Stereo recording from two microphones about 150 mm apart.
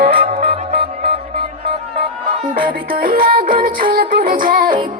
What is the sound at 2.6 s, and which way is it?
Music, 75° right (ahead or behind).